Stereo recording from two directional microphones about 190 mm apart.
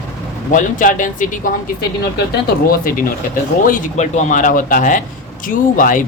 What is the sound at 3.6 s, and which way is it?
Speech, 40° left (ahead or behind).